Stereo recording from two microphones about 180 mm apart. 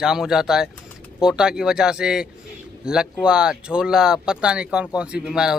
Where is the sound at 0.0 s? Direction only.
5° right (ahead or behind).